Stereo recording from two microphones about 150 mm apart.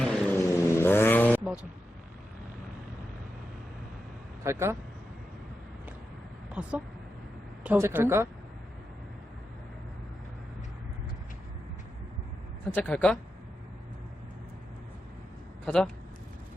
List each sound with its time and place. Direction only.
0.0 s vehicle: 5° left (ahead or behind)
0.3 s vehicle: 20° left (ahead or behind)
4.4 s speech: 20° right (ahead or behind)
6.5 s speech: 10° right (ahead or behind)
12.7 s speech: 10° left (ahead or behind)
15.6 s a man's voice: 5° left (ahead or behind)